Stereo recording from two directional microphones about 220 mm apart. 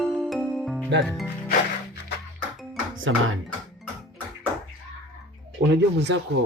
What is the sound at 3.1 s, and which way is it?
Speech, 65° right (ahead or behind).